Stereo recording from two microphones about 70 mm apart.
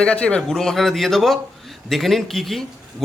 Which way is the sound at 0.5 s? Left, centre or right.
Centre.